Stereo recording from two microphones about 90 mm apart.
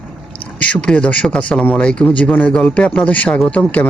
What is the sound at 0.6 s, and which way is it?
A man's voice, 10° left (ahead or behind).